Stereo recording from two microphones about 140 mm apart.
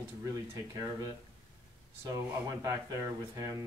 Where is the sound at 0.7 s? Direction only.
25° right (ahead or behind).